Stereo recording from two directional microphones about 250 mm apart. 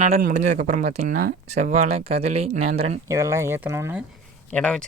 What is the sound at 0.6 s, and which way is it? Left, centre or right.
Speech, right.